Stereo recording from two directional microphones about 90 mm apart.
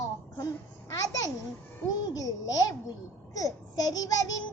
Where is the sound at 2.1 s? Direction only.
40° left (ahead or behind).